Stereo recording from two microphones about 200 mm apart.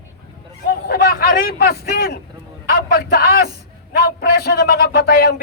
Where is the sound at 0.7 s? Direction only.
50° left (ahead or behind).